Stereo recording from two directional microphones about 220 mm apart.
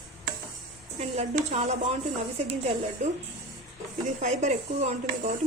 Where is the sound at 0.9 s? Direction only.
30° right (ahead or behind).